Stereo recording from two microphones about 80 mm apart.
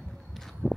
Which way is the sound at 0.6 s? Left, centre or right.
Centre.